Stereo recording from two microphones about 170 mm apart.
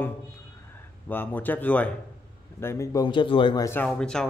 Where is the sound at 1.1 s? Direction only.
10° left (ahead or behind).